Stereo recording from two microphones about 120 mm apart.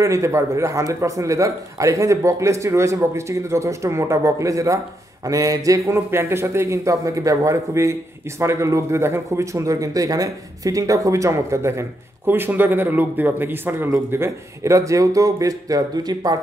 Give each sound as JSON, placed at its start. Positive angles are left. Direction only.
{"t": 0.0, "sound": "speech", "side_deg": -25}